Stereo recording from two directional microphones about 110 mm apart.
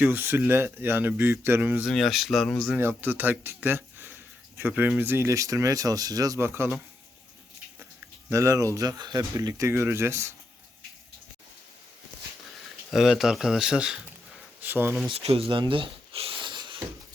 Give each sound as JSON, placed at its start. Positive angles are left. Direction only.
{"t": 0.0, "sound": "speech", "side_deg": -20}
{"t": 1.9, "sound": "speech", "side_deg": 0}
{"t": 2.7, "sound": "speech", "side_deg": -20}
{"t": 6.4, "sound": "speech", "side_deg": -20}
{"t": 8.3, "sound": "speech", "side_deg": -25}
{"t": 12.9, "sound": "speech", "side_deg": -5}
{"t": 14.6, "sound": "speech", "side_deg": -20}
{"t": 15.1, "sound": "a sound", "side_deg": -65}